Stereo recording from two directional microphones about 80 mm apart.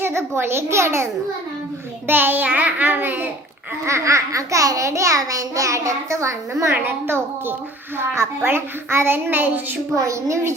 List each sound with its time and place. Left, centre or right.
0.0 s a child's voice: right
3.8 s a child's voice: right
9.9 s speech: right